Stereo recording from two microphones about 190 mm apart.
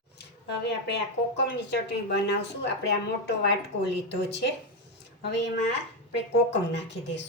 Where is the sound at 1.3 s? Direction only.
65° left (ahead or behind).